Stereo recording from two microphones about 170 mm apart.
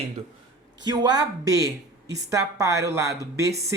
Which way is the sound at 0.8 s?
25° right (ahead or behind).